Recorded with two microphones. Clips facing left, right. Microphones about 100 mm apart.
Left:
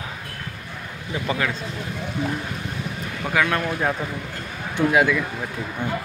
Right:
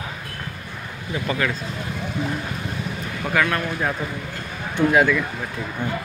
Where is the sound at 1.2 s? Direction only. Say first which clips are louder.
Right 1 dB; 20° left (ahead or behind).